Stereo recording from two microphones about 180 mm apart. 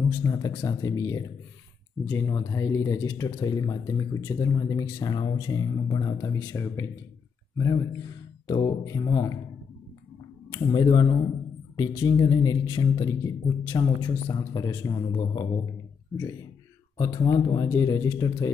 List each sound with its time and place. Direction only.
0.1 s speech: 20° left (ahead or behind)
10.5 s speech: 25° left (ahead or behind)